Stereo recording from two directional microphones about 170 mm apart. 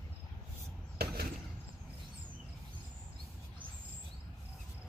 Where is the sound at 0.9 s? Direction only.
70° right (ahead or behind).